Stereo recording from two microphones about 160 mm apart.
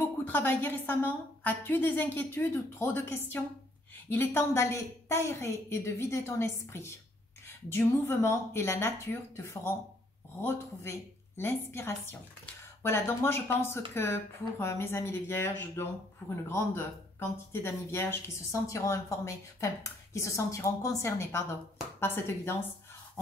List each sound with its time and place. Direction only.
0.0 s speech: 10° left (ahead or behind)